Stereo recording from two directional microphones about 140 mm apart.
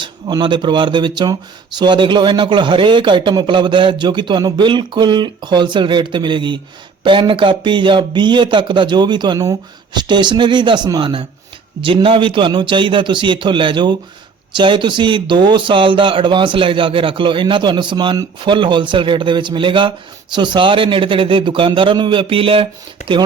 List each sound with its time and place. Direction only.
0.0 s speech: 30° right (ahead or behind)